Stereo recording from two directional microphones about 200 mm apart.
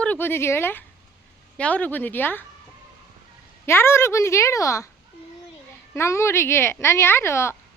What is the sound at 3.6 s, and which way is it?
Speech, 10° left (ahead or behind).